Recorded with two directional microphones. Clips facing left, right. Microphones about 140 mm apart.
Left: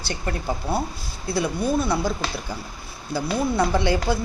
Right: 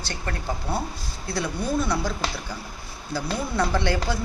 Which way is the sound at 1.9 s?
10° left (ahead or behind).